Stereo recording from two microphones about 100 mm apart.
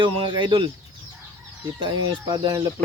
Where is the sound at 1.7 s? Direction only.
45° right (ahead or behind).